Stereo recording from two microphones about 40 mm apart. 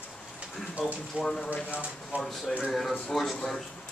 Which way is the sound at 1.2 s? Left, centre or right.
Right.